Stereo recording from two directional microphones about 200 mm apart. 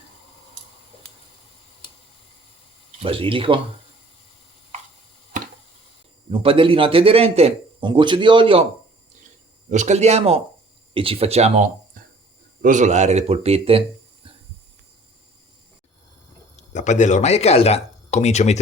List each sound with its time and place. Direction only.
3.0 s a man's voice: 25° right (ahead or behind)
6.3 s a man's voice: 25° right (ahead or behind)
9.6 s speech: 35° right (ahead or behind)
16.6 s speech: 35° left (ahead or behind)